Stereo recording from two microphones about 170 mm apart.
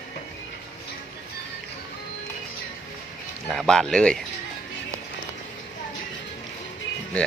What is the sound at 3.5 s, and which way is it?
Speech, 5° left (ahead or behind).